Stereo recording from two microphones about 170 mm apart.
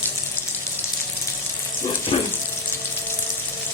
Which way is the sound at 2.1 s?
30° left (ahead or behind).